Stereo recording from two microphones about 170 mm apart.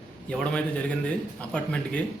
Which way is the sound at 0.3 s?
5° left (ahead or behind).